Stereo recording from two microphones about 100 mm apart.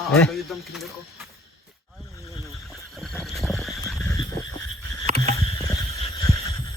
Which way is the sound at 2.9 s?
5° left (ahead or behind).